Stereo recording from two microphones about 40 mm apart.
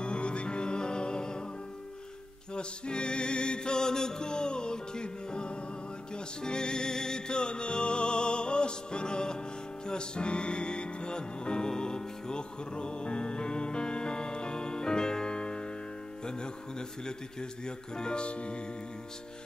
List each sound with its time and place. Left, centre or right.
0.0 s music: left
2.5 s music: left
17.0 s speech: centre